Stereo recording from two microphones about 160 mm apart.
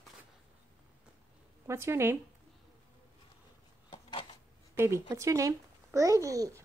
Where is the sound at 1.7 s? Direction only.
15° right (ahead or behind).